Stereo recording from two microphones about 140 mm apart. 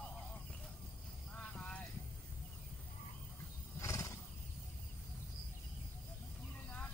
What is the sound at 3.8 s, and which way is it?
Wild animals, 20° left (ahead or behind).